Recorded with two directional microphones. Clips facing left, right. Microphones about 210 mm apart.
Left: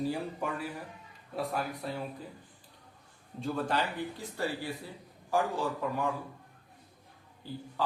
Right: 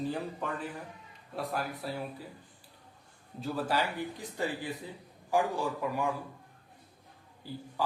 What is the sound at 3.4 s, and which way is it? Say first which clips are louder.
Speech: even; 5° right (ahead or behind).